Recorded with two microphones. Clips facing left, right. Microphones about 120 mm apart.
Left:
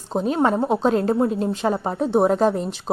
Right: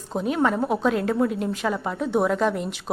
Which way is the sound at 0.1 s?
30° left (ahead or behind).